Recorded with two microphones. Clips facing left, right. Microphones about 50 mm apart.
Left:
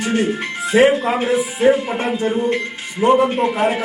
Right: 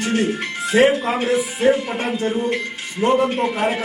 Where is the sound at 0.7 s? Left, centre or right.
Centre.